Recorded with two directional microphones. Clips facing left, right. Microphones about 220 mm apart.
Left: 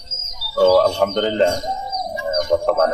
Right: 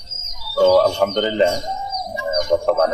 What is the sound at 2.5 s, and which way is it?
Speech, centre (ahead or behind).